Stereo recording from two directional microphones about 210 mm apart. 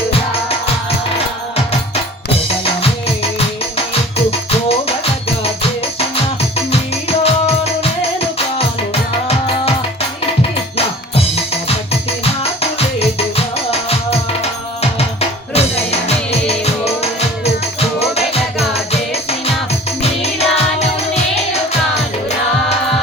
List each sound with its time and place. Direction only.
7.2 s music: 30° left (ahead or behind)
10.8 s music: 30° left (ahead or behind)
13.0 s music: 30° left (ahead or behind)